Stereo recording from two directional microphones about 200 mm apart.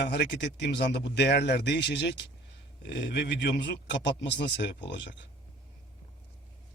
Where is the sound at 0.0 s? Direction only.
60° left (ahead or behind).